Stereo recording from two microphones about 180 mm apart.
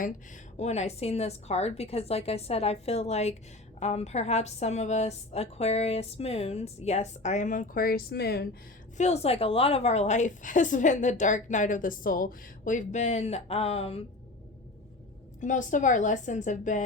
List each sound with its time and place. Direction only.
0.5 s a woman's voice: 40° left (ahead or behind); by 8.4 s 65° left (ahead or behind)
9.0 s a woman's voice: 35° left (ahead or behind)
15.4 s a woman's voice: 45° left (ahead or behind)